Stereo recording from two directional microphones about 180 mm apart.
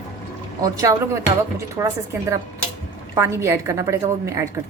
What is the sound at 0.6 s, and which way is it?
A woman's voice, 20° right (ahead or behind).